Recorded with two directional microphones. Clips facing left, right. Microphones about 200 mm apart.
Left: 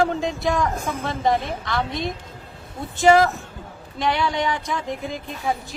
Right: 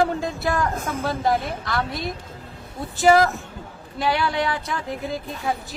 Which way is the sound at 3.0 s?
5° right (ahead or behind).